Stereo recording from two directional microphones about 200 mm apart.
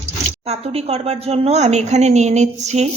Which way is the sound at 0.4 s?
30° right (ahead or behind).